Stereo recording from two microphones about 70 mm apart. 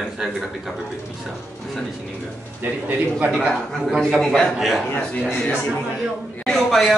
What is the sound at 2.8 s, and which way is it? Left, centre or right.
Speech, centre.